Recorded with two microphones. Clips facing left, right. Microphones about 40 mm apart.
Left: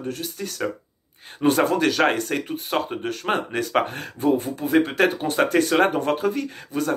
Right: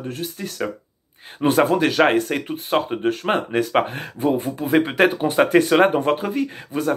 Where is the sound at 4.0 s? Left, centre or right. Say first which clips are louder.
Even; right.